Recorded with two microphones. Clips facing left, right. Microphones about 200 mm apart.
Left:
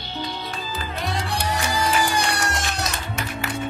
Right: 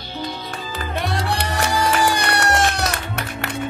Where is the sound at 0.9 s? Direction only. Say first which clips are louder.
Right 4 dB; 65° right (ahead or behind).